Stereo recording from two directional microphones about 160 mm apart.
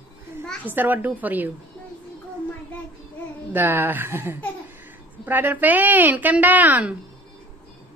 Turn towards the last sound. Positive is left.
turn(degrees=-10)  # may be behind; listen again after turning